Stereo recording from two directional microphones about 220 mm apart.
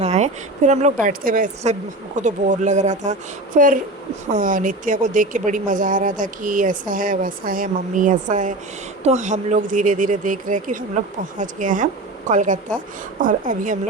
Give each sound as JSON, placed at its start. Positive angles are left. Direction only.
{"t": 0.0, "sound": "speech", "side_deg": -30}